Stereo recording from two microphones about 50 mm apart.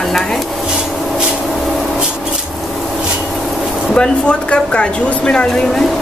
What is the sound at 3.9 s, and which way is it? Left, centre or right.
Speech, left.